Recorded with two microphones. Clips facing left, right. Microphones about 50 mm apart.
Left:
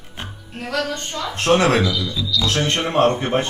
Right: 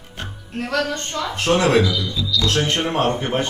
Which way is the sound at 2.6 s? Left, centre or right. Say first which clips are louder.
Left 2 dB; left.